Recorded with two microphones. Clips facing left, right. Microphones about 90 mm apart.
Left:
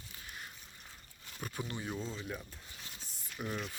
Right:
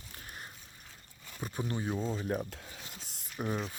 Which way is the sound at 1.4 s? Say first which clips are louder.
Right 5 dB; 20° right (ahead or behind).